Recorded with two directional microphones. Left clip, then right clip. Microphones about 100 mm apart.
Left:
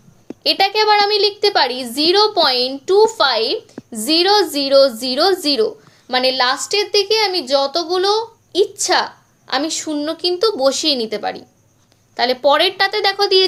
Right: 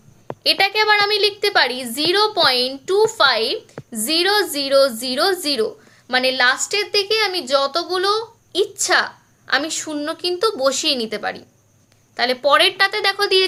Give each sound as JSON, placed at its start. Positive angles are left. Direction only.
{"t": 0.4, "sound": "a woman's voice", "side_deg": 25}